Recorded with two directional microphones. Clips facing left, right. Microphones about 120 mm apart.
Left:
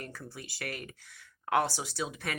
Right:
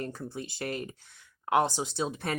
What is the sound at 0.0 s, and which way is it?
Speech, 25° right (ahead or behind).